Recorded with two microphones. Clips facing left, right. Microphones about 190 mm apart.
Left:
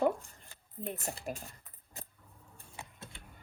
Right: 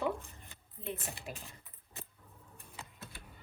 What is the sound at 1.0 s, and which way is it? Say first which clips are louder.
Speech: left 5 dB; 35° left (ahead or behind).